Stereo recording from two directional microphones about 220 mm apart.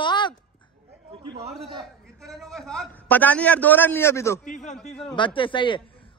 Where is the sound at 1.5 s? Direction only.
Centre (ahead or behind).